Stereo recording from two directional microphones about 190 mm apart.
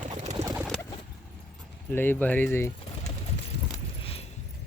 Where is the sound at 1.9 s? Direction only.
10° left (ahead or behind).